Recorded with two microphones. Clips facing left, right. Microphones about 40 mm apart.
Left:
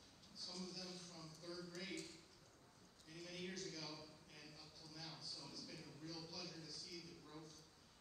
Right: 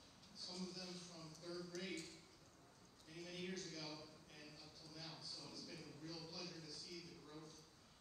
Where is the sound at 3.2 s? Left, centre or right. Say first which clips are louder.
Right 1 dB; right.